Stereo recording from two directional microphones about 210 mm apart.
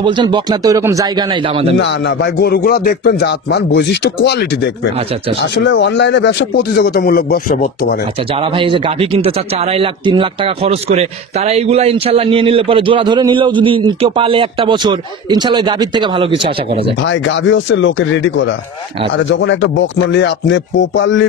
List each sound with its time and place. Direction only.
0.0 s speech: 20° right (ahead or behind)
1.8 s speech: 55° left (ahead or behind); by 7.7 s 40° left (ahead or behind)
8.4 s speech: 25° right (ahead or behind)
17.0 s music: 65° left (ahead or behind)